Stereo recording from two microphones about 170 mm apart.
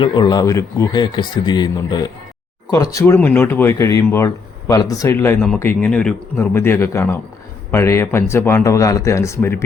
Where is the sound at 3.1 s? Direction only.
10° left (ahead or behind).